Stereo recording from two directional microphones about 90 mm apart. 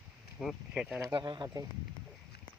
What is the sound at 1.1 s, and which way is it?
Speech, 55° right (ahead or behind).